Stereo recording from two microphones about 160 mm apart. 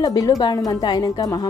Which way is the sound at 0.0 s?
20° left (ahead or behind).